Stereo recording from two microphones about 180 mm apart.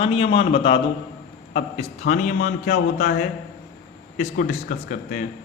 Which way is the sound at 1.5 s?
45° left (ahead or behind).